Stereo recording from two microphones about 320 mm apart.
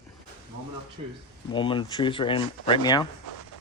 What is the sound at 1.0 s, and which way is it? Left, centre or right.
Speech, centre.